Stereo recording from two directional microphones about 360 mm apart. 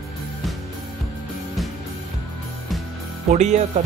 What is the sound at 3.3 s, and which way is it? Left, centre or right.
Speech, centre.